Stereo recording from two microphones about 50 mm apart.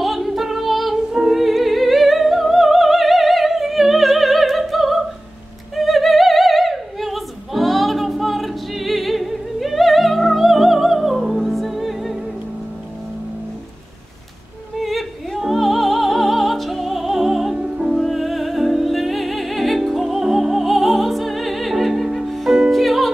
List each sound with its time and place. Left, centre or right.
0.0 s female singing: centre
1.1 s opera: centre
14.8 s opera: centre
17.6 s music: centre
17.9 s music: centre